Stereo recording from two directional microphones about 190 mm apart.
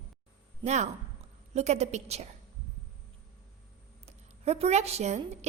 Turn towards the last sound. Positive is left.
turn(degrees=-35)  # may be behind; listen again after turning